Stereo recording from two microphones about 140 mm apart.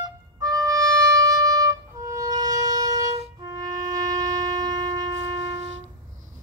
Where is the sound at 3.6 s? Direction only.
25° right (ahead or behind).